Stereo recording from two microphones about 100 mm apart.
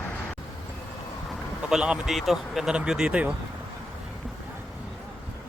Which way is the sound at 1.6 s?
10° right (ahead or behind).